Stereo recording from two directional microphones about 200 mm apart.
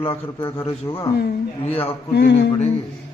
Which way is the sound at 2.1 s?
60° left (ahead or behind).